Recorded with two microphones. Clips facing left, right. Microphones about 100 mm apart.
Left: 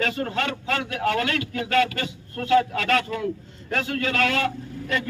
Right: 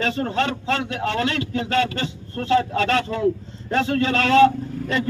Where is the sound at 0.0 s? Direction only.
30° right (ahead or behind).